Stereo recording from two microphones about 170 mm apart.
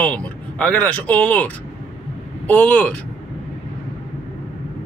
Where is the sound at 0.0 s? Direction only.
10° left (ahead or behind).